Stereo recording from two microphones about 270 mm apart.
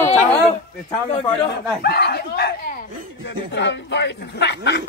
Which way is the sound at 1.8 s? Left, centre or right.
Left.